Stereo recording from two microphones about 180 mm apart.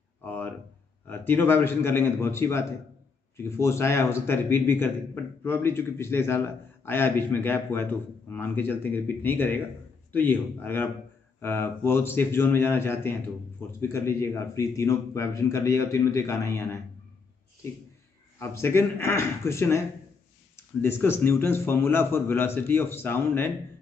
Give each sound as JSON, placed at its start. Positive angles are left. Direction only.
{"t": 0.2, "sound": "a sound", "side_deg": 10}
{"t": 1.0, "sound": "a man's voice", "side_deg": 10}
{"t": 18.4, "sound": "a man's voice", "side_deg": 15}